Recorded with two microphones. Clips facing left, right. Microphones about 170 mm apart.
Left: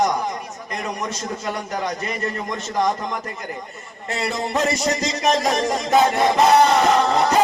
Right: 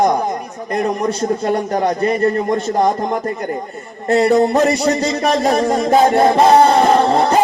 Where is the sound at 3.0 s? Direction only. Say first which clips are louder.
Right 9 dB; 50° right (ahead or behind).